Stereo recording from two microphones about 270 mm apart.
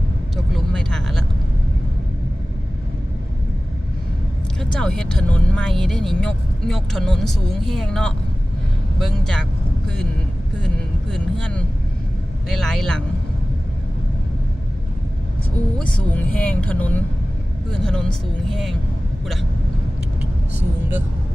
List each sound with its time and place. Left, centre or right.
0.3 s vehicle: centre
4.6 s speech: centre
11.1 s speech: centre
15.8 s speech: centre